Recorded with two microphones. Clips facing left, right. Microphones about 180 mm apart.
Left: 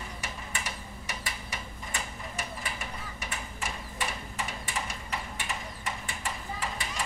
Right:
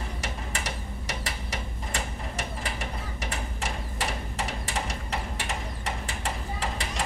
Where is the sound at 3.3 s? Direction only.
40° right (ahead or behind).